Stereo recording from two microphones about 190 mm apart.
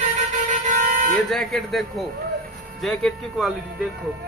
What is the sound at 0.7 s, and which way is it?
Vehicle, 45° right (ahead or behind).